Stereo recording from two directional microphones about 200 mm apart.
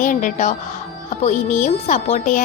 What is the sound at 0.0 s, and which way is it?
A woman's voice, 40° left (ahead or behind).